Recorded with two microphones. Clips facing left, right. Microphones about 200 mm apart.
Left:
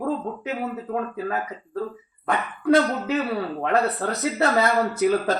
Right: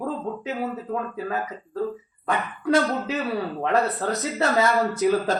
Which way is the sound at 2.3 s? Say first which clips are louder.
Left 3 dB; 60° left (ahead or behind).